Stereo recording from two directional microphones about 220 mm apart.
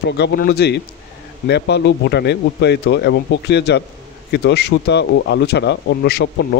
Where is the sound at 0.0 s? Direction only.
50° left (ahead or behind).